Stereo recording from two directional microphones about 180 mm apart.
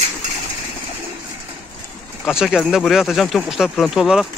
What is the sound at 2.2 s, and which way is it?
Speech, 5° right (ahead or behind).